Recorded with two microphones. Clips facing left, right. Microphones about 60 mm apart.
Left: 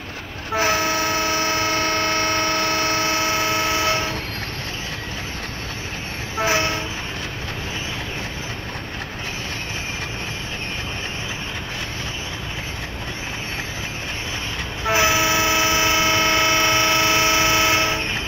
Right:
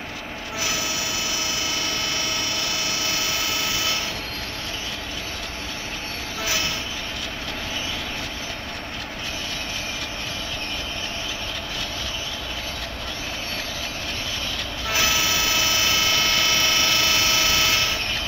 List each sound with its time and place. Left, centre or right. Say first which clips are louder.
0.6 s vehicle: left 9 dB; left
6.3 s train: left 7 dB; left
14.9 s vehicle: left 6 dB; left